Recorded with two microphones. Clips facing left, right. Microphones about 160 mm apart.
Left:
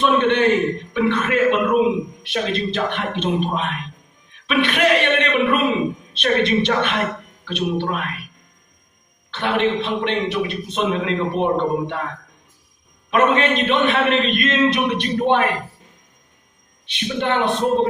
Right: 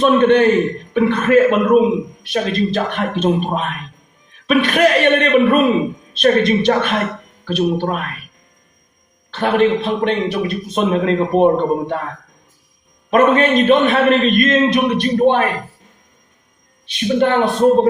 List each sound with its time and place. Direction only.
0.0 s a man's voice: 40° right (ahead or behind)
9.3 s a man's voice: 40° right (ahead or behind)
13.1 s a man's voice: 40° right (ahead or behind)
16.8 s a man's voice: 40° right (ahead or behind)